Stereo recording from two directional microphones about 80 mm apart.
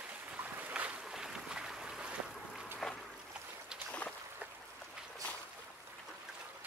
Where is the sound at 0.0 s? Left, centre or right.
Centre.